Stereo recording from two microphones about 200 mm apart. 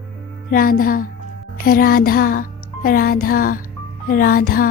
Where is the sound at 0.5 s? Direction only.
45° left (ahead or behind).